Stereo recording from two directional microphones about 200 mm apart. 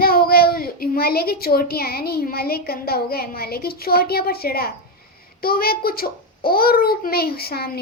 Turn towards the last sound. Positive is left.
turn(degrees=50)  # may be behind; listen again after turning